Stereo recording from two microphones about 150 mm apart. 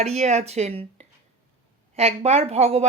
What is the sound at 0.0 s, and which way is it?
Speech, 45° right (ahead or behind).